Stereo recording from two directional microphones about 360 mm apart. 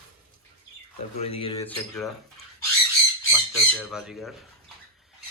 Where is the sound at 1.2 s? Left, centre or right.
Centre.